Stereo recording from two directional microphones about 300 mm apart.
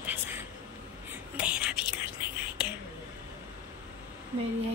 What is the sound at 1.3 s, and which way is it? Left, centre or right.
Whispering, centre.